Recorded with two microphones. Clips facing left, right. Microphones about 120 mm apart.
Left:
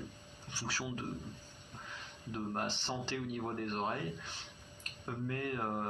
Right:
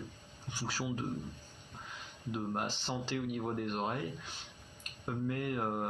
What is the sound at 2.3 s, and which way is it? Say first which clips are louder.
Speech: right 1 dB; 15° right (ahead or behind).